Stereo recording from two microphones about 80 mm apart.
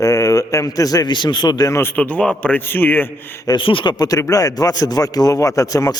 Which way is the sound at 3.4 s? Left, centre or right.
Left.